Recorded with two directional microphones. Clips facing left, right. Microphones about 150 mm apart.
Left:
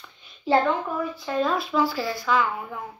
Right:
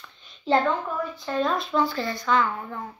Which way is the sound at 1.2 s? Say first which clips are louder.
Even; 5° left (ahead or behind).